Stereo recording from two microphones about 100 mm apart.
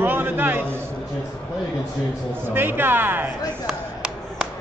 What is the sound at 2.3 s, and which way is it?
Speech, 20° right (ahead or behind).